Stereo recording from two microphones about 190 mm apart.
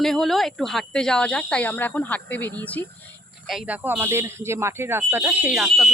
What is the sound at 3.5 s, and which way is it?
Speech, 5° right (ahead or behind).